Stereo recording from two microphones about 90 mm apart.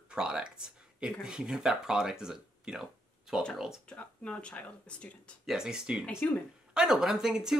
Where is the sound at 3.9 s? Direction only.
15° left (ahead or behind).